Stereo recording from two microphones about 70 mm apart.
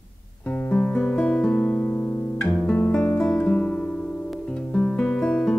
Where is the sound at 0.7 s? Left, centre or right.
Left.